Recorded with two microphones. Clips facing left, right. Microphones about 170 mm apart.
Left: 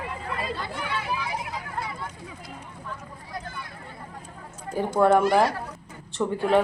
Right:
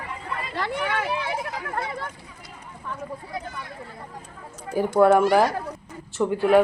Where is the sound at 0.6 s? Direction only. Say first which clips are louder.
Right 5 dB; 75° right (ahead or behind).